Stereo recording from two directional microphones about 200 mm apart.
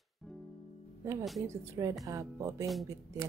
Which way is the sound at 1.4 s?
15° right (ahead or behind).